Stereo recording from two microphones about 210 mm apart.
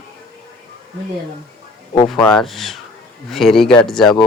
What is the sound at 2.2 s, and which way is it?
Speech, centre (ahead or behind).